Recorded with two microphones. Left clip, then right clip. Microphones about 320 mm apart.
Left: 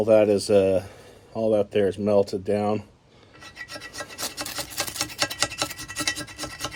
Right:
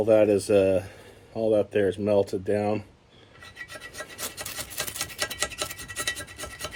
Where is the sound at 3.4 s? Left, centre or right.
Centre.